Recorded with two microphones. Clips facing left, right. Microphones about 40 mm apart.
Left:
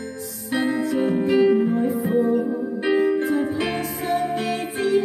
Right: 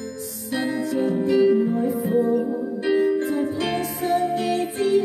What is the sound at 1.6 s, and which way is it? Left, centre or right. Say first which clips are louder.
Music: left 1 dB; centre.